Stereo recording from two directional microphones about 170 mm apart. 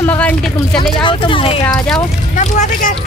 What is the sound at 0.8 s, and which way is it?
Speech, 30° left (ahead or behind).